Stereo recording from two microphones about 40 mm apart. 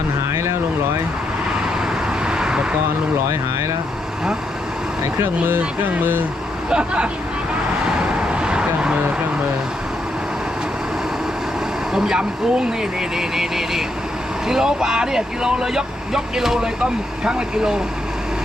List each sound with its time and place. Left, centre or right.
2.2 s vehicle: centre
6.7 s speech: right
8.3 s vehicle: right
11.9 s speech: centre